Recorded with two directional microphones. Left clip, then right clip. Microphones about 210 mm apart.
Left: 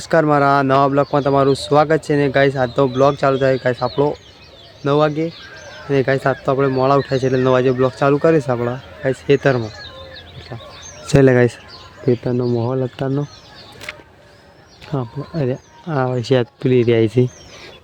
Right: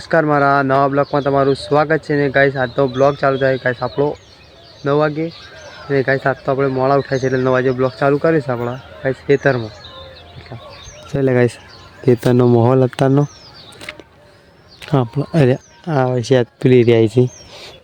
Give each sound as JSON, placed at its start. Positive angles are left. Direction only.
{"t": 0.0, "sound": "speech", "side_deg": 5}
{"t": 11.1, "sound": "speech", "side_deg": 40}
{"t": 12.2, "sound": "speech", "side_deg": -30}
{"t": 13.8, "sound": "a sound", "side_deg": -10}
{"t": 14.8, "sound": "speech", "side_deg": -30}
{"t": 16.0, "sound": "speech", "side_deg": -10}